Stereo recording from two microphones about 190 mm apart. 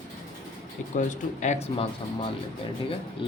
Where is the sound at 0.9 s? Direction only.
40° left (ahead or behind).